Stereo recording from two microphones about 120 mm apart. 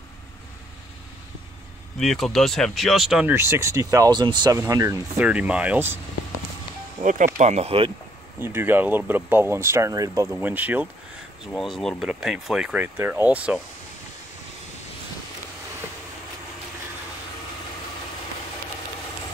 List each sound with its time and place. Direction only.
2.0 s speech: centre (ahead or behind)
3.3 s speech: 20° right (ahead or behind); by 4.6 s 40° right (ahead or behind)
4.6 s speech: 25° right (ahead or behind)
5.2 s speech: 10° right (ahead or behind)
7.0 s speech: 90° right
7.3 s speech: 70° right (ahead or behind)
8.4 s speech: 20° right (ahead or behind)
11.5 s speech: centre (ahead or behind)
12.8 s speech: 20° right (ahead or behind)